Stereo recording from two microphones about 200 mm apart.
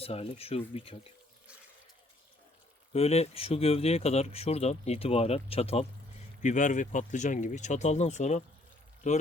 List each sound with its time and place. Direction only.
0.0 s speech: 30° left (ahead or behind)
2.9 s speech: 30° left (ahead or behind)